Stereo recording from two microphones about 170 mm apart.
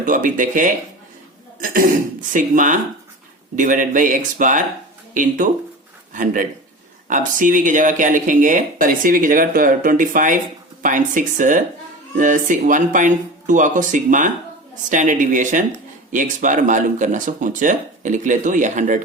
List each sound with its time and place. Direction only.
0.0 s speech: 50° right (ahead or behind)
2.3 s speech: 50° right (ahead or behind)
7.1 s speech: 50° right (ahead or behind)